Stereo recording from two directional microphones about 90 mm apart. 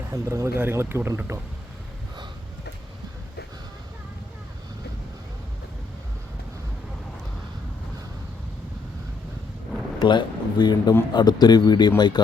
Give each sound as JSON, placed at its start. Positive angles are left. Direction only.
{"t": 0.1, "sound": "speech", "side_deg": -35}
{"t": 10.0, "sound": "speech", "side_deg": 55}